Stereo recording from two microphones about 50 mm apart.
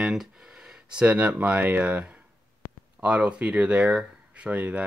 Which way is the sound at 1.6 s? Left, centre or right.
Right.